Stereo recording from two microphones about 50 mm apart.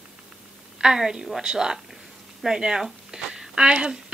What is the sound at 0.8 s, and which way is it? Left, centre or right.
A woman's voice, centre.